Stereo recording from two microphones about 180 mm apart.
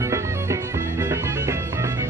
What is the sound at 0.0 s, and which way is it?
Music, 15° right (ahead or behind).